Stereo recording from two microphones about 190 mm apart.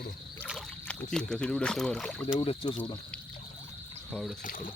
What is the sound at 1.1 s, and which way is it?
Speech, 5° left (ahead or behind).